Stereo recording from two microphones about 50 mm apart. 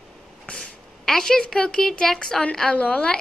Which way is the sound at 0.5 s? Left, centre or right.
Centre.